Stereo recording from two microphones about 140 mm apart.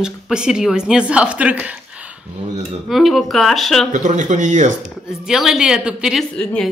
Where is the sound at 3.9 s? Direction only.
60° right (ahead or behind).